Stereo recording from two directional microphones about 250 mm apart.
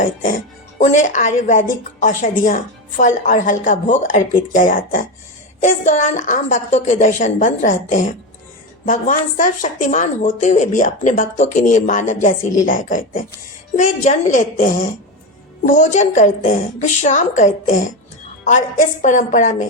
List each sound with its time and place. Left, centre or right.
0.0 s a woman's voice: left
19.0 s a woman's voice: left